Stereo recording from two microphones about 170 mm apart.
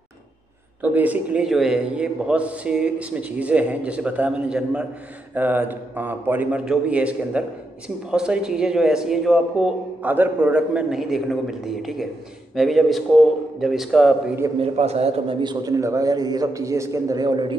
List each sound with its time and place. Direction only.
0.8 s a man's voice: 10° right (ahead or behind)
14.6 s a man's voice: 40° right (ahead or behind)